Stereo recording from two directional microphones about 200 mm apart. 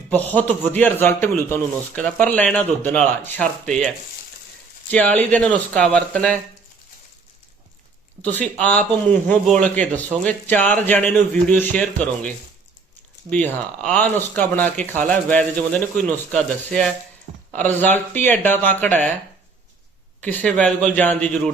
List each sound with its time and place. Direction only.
0.1 s a man's voice: 10° left (ahead or behind)
8.2 s a man's voice: 10° left (ahead or behind)
13.3 s a man's voice: 5° left (ahead or behind)
20.2 s a man's voice: 5° left (ahead or behind)